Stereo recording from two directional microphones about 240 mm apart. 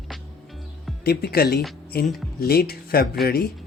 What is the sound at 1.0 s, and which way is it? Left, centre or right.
Speech, left.